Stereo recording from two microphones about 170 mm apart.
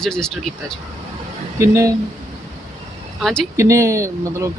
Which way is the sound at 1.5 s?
15° right (ahead or behind).